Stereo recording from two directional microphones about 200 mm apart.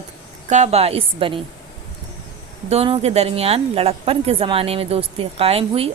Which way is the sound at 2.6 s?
30° right (ahead or behind).